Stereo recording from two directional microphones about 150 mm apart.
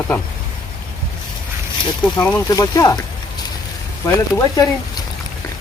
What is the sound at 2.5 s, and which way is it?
Speech, 25° left (ahead or behind).